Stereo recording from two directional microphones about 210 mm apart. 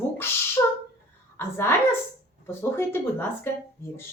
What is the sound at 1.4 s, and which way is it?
Speech, 10° left (ahead or behind).